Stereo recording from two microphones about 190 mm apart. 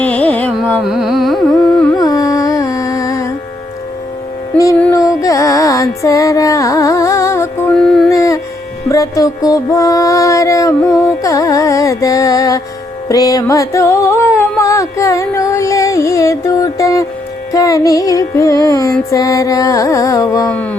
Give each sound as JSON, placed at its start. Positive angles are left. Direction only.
{"t": 0.0, "sound": "carnatic music", "side_deg": 5}
{"t": 2.0, "sound": "music", "side_deg": 20}
{"t": 4.8, "sound": "music", "side_deg": 15}
{"t": 7.8, "sound": "a sound", "side_deg": 0}
{"t": 8.1, "sound": "a sound", "side_deg": 15}
{"t": 8.9, "sound": "music", "side_deg": 20}